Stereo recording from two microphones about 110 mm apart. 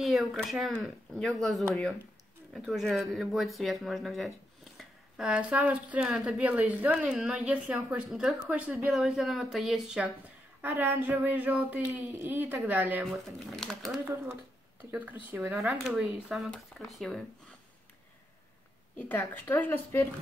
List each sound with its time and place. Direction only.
0.0 s speech: centre (ahead or behind)
8.9 s speech: centre (ahead or behind)
10.6 s speech: 15° right (ahead or behind)
13.1 s speech: 5° left (ahead or behind)
14.0 s speech: 25° right (ahead or behind)
15.5 s speech: centre (ahead or behind)
18.9 s a woman's voice: 15° left (ahead or behind)